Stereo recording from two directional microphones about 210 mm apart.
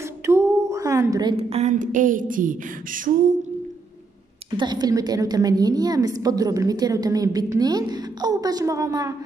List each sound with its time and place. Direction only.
0.3 s a sound: 15° right (ahead or behind)
1.3 s speech: 30° right (ahead or behind)
4.6 s a woman's voice: 20° right (ahead or behind)